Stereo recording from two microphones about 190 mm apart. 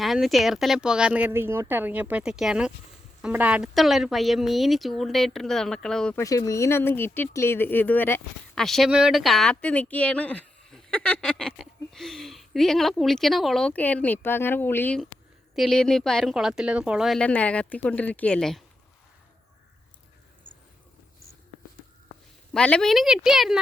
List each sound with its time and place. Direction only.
0.0 s speech: centre (ahead or behind)
6.1 s speech: 20° left (ahead or behind); by 18.6 s 5° left (ahead or behind)
22.5 s speech: 5° left (ahead or behind)